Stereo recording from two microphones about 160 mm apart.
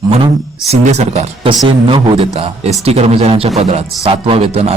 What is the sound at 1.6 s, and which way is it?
A man's voice, 35° right (ahead or behind).